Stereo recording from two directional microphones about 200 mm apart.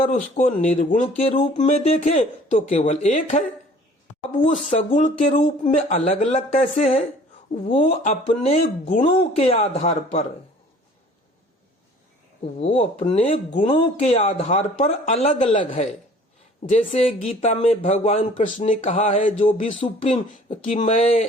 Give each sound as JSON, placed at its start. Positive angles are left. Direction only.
{"t": 0.0, "sound": "speech", "side_deg": 40}
{"t": 12.5, "sound": "speech", "side_deg": 30}